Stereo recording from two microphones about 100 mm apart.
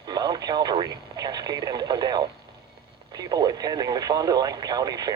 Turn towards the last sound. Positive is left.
turn(degrees=-40)  # may be behind; listen again after turning